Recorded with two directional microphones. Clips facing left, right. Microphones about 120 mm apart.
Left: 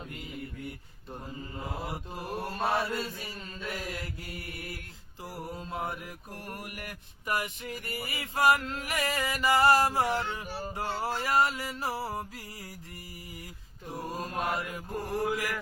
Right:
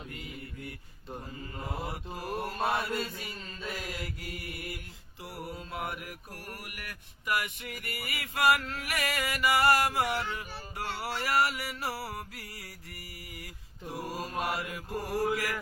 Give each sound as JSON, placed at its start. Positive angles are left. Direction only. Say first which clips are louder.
{"t": 1.1, "sound": "mantra", "louder": "left 1 dB", "side_deg": 0}
{"t": 5.2, "sound": "mantra", "louder": "left 1 dB", "side_deg": 25}
{"t": 13.8, "sound": "mantra", "louder": "even", "side_deg": -5}